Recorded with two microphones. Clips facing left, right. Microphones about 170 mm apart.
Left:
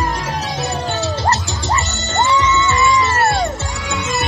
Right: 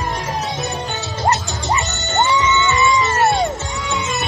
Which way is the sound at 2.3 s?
20° right (ahead or behind).